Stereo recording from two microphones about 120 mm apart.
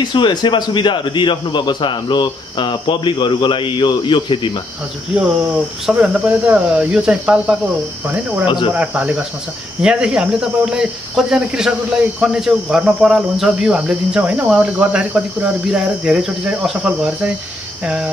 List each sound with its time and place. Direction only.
0.0 s a man's voice: 40° left (ahead or behind)
5.9 s cricket: 5° right (ahead or behind)
8.7 s cricket: 10° right (ahead or behind)
9.8 s speech: 5° right (ahead or behind)
12.2 s cricket: 5° right (ahead or behind)